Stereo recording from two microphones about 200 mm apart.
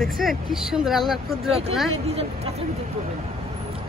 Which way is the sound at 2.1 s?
30° right (ahead or behind).